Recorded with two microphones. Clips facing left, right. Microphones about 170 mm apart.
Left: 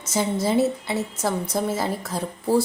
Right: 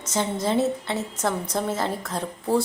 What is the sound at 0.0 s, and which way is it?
A woman's voice, 5° left (ahead or behind).